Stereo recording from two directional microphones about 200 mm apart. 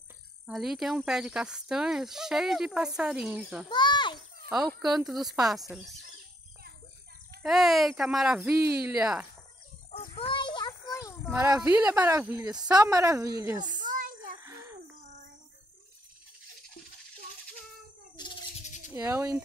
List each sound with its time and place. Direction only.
0.5 s speech: centre (ahead or behind)
3.6 s a child's voice: 20° left (ahead or behind)
4.5 s speech: centre (ahead or behind)
7.4 s speech: centre (ahead or behind)
9.8 s a sound: 30° left (ahead or behind)
11.3 s speech: 15° right (ahead or behind)
13.8 s a sound: 40° right (ahead or behind)
14.4 s a sound: 15° right (ahead or behind)
18.1 s bird: 20° left (ahead or behind)
18.9 s speech: 15° right (ahead or behind)